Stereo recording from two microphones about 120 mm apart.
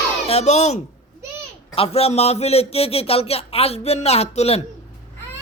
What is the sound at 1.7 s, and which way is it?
A man's voice, 55° left (ahead or behind).